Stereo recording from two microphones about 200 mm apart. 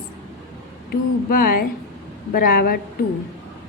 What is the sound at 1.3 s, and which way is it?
A woman's voice, 45° left (ahead or behind).